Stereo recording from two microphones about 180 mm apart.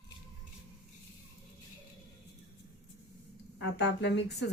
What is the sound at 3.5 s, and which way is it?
Speech, 70° left (ahead or behind).